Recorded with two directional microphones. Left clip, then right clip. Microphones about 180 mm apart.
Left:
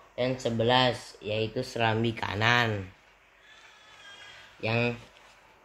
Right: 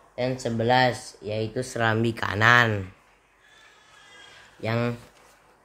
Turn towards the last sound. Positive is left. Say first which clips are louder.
# right 1 dB
turn(degrees=-20)  # may be behind; listen again after turning